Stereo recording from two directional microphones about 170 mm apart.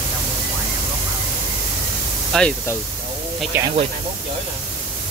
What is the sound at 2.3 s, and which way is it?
Speech, 5° left (ahead or behind).